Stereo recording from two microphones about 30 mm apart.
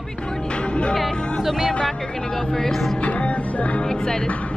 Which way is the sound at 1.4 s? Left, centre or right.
Centre.